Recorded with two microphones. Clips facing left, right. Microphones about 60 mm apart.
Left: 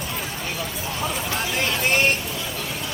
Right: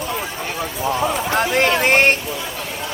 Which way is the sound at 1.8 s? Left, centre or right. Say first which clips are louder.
Right 4 dB; right.